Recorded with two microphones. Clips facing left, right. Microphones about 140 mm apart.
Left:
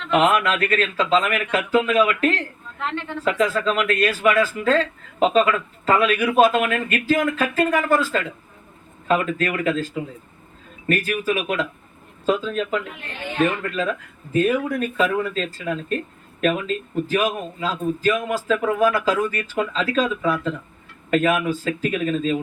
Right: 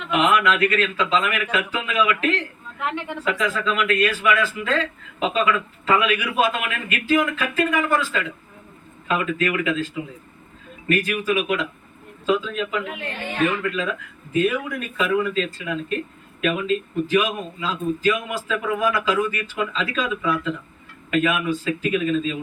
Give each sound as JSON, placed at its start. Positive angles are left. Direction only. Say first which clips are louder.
{"t": 0.1, "sound": "a man's voice", "louder": "left 1 dB", "side_deg": 45}
{"t": 2.7, "sound": "a woman's voice", "louder": "right 1 dB", "side_deg": -10}
{"t": 3.2, "sound": "a man's voice", "louder": "left 4 dB", "side_deg": 40}